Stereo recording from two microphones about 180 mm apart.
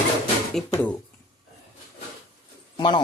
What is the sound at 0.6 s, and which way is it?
Speech, 5° left (ahead or behind).